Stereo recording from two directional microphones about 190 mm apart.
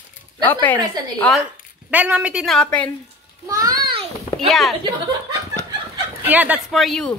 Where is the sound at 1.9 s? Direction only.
5° right (ahead or behind).